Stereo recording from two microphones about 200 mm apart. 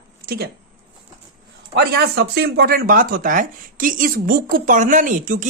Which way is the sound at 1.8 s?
55° right (ahead or behind).